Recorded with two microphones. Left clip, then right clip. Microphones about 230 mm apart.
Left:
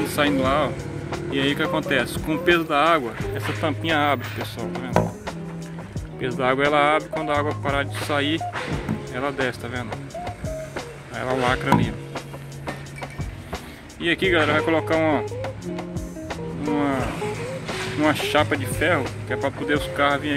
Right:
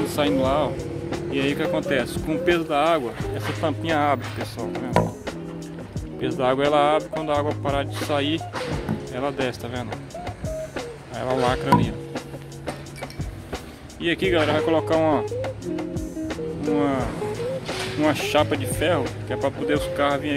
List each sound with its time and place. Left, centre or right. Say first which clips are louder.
0.1 s speech: left 1 dB; centre
6.3 s speech: even; centre
9.1 s music: left 1 dB; centre
14.0 s speech: left 1 dB; centre
16.3 s music: right 1 dB; centre
17.6 s speech: left 2 dB; centre